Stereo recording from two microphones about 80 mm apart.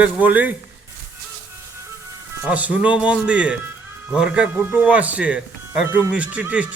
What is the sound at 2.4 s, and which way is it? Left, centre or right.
Speech, centre.